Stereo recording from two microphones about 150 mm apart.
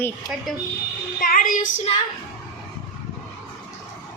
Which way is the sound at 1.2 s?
65° left (ahead or behind).